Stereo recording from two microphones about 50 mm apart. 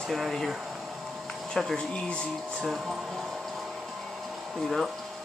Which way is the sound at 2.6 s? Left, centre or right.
Centre.